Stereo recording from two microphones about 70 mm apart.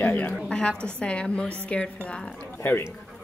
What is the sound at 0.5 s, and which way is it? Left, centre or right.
A woman's voice, centre.